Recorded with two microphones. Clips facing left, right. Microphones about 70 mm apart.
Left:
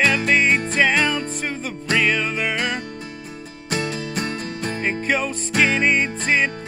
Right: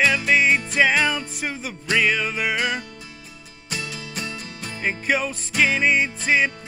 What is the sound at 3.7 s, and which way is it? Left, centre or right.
Music, left.